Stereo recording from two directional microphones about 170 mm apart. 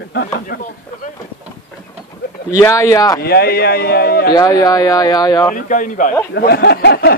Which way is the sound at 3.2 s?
65° left (ahead or behind).